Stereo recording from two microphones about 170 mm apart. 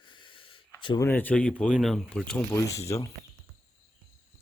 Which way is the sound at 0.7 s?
30° left (ahead or behind).